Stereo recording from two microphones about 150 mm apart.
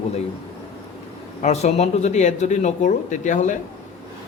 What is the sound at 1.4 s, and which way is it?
Speech, 45° left (ahead or behind).